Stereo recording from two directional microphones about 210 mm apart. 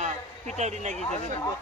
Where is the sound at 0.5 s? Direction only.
35° right (ahead or behind).